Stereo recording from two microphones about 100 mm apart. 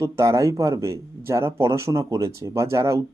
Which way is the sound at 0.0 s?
30° right (ahead or behind).